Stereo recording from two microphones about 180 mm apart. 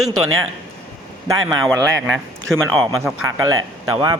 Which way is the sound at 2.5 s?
Centre (ahead or behind).